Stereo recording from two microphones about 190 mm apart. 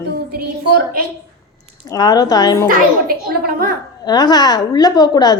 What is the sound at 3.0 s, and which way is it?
Speech, 50° right (ahead or behind).